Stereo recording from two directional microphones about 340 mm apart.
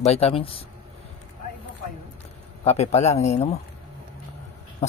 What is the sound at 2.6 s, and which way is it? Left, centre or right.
Speech, centre.